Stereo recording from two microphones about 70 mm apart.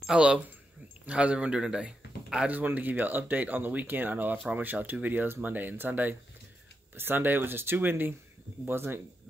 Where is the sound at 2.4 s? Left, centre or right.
Right.